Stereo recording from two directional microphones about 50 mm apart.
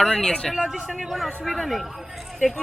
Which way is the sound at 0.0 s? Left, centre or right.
Centre.